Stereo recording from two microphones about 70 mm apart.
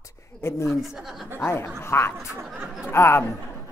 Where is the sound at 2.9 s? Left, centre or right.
Left.